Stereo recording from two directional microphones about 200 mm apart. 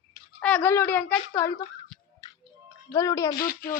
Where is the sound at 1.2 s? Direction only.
20° left (ahead or behind).